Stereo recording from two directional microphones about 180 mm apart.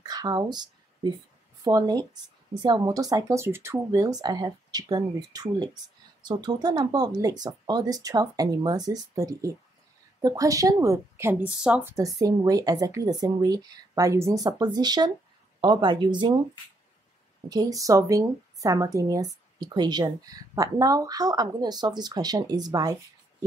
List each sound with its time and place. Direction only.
0.0 s a sound: 20° right (ahead or behind)
1.6 s a woman's voice: 20° right (ahead or behind)
11.9 s speech: 20° right (ahead or behind)
17.5 s speech: 20° right (ahead or behind)